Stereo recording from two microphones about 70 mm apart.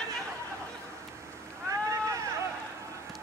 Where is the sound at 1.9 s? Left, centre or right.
Right.